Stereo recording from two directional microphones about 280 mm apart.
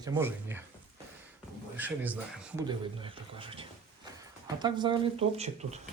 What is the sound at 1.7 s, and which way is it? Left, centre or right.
Speech, centre.